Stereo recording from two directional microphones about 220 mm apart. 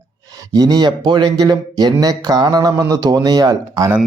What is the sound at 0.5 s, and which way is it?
Speech, 15° right (ahead or behind).